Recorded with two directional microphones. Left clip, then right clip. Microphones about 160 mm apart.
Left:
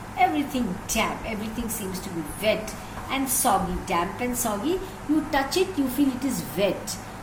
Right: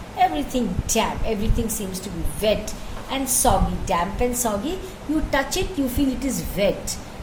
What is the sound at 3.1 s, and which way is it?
Speech, 90° right.